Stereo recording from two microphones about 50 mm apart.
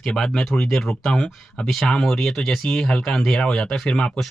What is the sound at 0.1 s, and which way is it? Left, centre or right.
Speech, centre.